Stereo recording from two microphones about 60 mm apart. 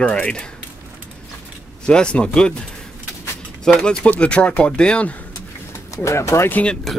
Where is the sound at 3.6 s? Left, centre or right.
Centre.